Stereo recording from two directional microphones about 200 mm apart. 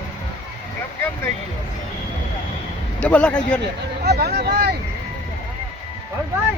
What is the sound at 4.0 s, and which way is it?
Speech, 55° right (ahead or behind).